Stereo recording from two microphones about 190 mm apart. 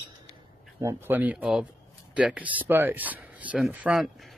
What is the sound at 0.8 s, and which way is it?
Speech, 10° right (ahead or behind).